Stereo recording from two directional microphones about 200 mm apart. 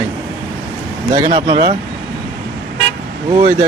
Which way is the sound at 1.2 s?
25° right (ahead or behind).